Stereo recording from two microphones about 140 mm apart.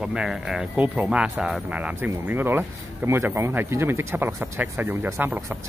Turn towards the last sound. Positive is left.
turn(degrees=-15)  # may be behind; listen again after turning